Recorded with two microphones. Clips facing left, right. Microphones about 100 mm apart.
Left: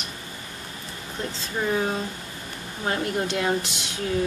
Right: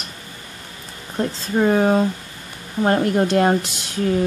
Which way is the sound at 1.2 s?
45° right (ahead or behind).